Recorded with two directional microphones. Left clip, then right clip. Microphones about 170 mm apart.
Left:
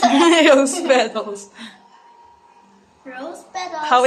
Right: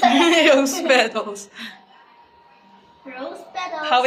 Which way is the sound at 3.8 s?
35° left (ahead or behind).